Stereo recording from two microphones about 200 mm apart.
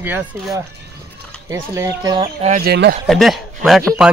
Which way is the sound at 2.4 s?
35° right (ahead or behind).